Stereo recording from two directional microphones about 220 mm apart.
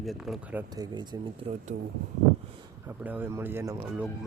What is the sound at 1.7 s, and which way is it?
Speech, 40° right (ahead or behind).